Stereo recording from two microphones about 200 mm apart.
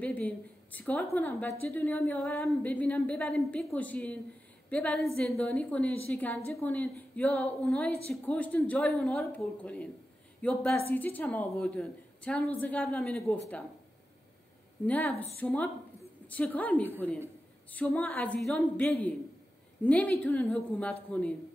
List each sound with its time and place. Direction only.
0.0 s a woman's voice: 10° left (ahead or behind)
14.9 s a woman's voice: 10° left (ahead or behind)